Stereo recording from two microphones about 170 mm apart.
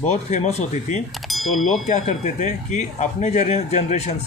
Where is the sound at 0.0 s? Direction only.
40° left (ahead or behind).